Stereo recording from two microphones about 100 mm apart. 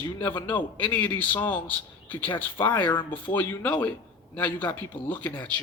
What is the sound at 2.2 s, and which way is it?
Speech, 55° left (ahead or behind).